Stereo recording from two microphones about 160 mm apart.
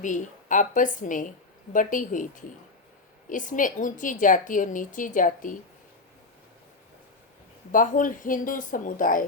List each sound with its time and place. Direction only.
0.0 s a woman's voice: 50° left (ahead or behind)
7.7 s a woman's voice: 55° left (ahead or behind)